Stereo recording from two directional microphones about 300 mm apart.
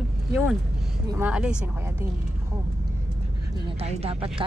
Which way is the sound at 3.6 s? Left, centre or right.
Centre.